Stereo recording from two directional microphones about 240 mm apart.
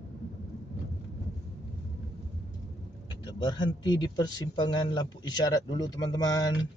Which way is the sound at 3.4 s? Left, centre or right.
Centre.